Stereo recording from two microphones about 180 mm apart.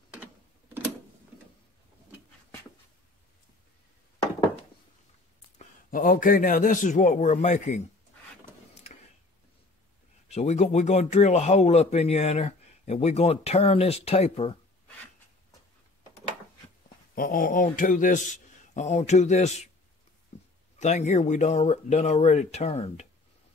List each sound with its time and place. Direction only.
5.9 s a man's voice: 50° left (ahead or behind)
10.2 s a man's voice: 40° left (ahead or behind)
17.1 s a man's voice: 50° left (ahead or behind)
20.3 s a sound: 35° left (ahead or behind)
20.8 s a man's voice: 40° left (ahead or behind)